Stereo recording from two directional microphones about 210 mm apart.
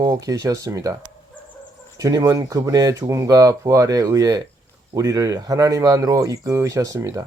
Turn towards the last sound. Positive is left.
turn(degrees=-15)  # may be behind; listen again after turning